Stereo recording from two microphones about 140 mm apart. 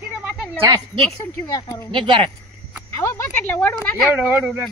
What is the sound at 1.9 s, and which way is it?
Speech, 35° right (ahead or behind).